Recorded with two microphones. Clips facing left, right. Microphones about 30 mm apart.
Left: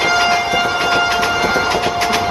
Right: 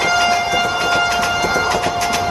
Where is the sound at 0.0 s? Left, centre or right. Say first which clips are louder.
Left 1 dB; centre.